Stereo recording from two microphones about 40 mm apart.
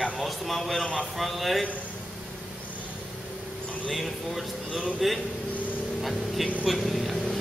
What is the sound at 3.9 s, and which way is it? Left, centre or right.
Speech, centre.